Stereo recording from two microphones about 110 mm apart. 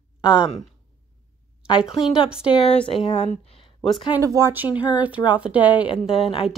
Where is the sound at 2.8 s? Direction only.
50° left (ahead or behind).